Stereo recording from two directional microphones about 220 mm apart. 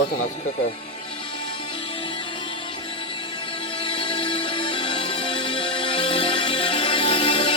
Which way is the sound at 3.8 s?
20° left (ahead or behind).